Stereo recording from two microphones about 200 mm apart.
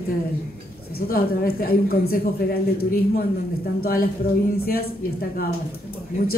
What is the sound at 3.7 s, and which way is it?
Speech, 50° left (ahead or behind).